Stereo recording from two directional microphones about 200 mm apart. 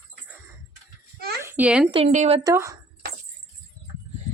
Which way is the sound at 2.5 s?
15° right (ahead or behind).